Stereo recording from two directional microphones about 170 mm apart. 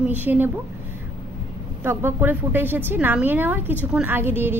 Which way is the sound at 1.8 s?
10° right (ahead or behind).